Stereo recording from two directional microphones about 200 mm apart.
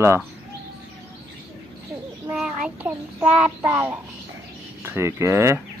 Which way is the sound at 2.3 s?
5° right (ahead or behind).